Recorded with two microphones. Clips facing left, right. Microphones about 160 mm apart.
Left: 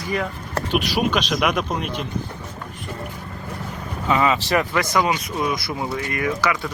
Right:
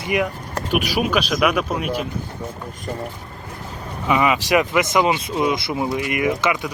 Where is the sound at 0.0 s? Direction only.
20° right (ahead or behind).